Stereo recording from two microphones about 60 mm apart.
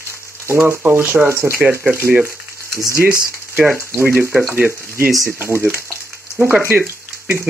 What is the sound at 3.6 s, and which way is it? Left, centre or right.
Speech, right.